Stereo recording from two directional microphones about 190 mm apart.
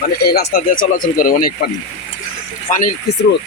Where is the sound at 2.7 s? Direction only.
45° left (ahead or behind).